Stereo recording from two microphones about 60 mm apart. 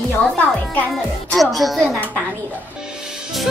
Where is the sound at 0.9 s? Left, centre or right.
Centre.